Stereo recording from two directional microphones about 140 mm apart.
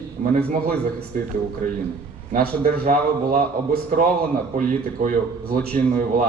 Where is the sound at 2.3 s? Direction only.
90° right.